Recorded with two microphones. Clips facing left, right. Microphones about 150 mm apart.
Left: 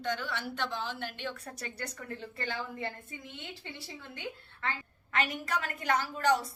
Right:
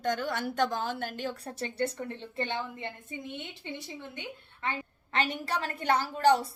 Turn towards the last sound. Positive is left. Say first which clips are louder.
# right 4 dB
turn(degrees=-35)  # may be behind; listen again after turning